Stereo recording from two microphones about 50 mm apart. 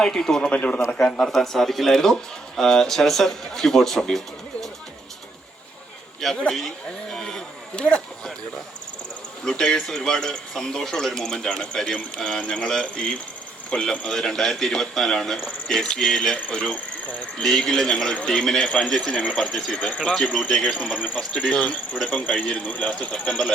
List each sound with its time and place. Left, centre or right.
0.0 s a man's voice: centre
0.5 s a man's voice: left
1.3 s a man's voice: centre
7.1 s a man's voice: centre
7.8 s speech: centre
9.4 s a man's voice: centre
13.7 s a man's voice: centre
17.4 s a man's voice: centre
19.7 s speech: left
22.0 s speech: left